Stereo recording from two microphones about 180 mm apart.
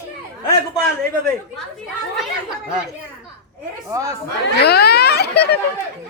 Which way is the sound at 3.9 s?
20° right (ahead or behind).